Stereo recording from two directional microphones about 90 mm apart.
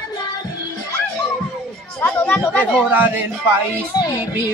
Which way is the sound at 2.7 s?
20° right (ahead or behind).